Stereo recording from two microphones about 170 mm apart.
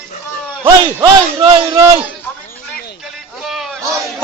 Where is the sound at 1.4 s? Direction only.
25° right (ahead or behind).